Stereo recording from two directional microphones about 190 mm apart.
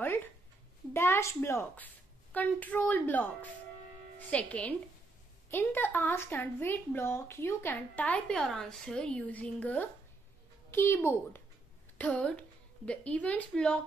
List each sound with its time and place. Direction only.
0.0 s a sound: 10° left (ahead or behind)
0.9 s speech: 15° left (ahead or behind)
4.3 s a woman's voice: 5° left (ahead or behind)